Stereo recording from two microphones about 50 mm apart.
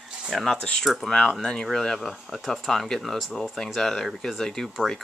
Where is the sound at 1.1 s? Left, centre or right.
Centre.